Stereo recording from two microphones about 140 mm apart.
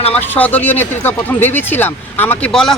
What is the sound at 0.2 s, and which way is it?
Speech, 10° left (ahead or behind).